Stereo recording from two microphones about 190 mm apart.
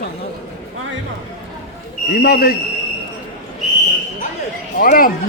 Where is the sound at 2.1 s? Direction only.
55° left (ahead or behind).